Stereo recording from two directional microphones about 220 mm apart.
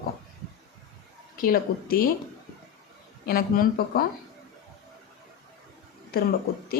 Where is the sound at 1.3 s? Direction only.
40° left (ahead or behind).